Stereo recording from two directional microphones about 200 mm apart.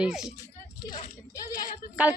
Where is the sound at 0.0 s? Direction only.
5° right (ahead or behind).